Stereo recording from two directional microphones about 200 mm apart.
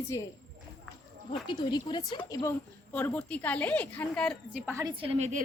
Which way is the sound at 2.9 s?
5° left (ahead or behind).